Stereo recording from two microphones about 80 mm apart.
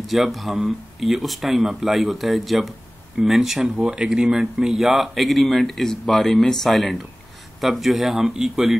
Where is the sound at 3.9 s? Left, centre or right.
Centre.